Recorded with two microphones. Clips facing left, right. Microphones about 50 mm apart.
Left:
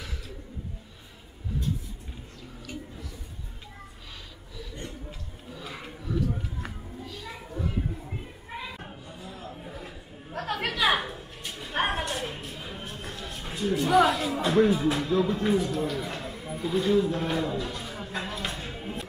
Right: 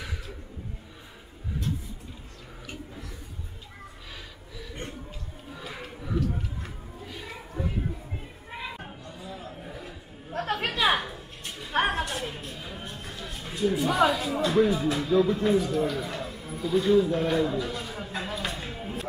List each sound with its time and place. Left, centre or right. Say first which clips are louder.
5.5 s a sound: even; centre
7.1 s a sound: right 2 dB; right
9.2 s chatter: right 1 dB; centre
10.3 s chatter: right 1 dB; right
11.0 s music: left 1 dB; centre
13.4 s speech: right 2 dB; centre
16.0 s music: right 1 dB; centre